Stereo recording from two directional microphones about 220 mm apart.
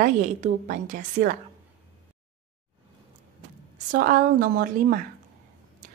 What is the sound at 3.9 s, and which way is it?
A woman's voice, 40° right (ahead or behind).